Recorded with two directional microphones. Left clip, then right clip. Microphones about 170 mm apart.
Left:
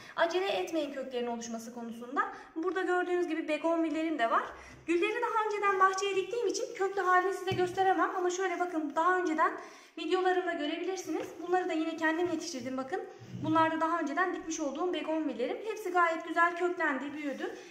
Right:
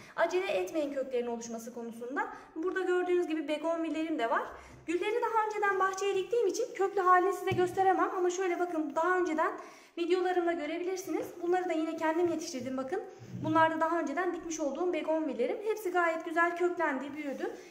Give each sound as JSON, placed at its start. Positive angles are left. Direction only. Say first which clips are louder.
{"t": 0.2, "sound": "a woman's voice", "louder": "even", "side_deg": -50}
{"t": 9.9, "sound": "a woman's voice", "louder": "even", "side_deg": -50}